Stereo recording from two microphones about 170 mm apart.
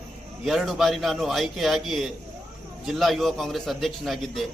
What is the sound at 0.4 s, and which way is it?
A man's voice, centre (ahead or behind).